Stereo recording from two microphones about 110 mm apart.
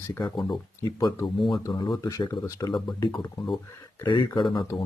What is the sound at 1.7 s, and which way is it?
Speech, 45° left (ahead or behind).